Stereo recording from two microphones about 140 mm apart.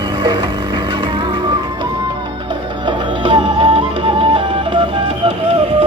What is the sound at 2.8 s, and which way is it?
Music, 40° right (ahead or behind).